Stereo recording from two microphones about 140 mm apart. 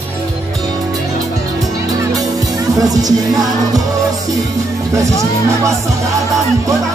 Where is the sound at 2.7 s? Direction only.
25° right (ahead or behind).